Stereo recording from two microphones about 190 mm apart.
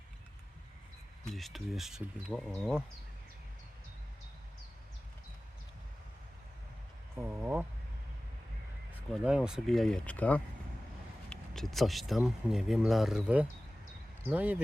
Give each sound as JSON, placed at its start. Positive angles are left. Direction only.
{"t": 1.3, "sound": "speech", "side_deg": 0}
{"t": 7.2, "sound": "a sound", "side_deg": -10}
{"t": 8.9, "sound": "speech", "side_deg": -5}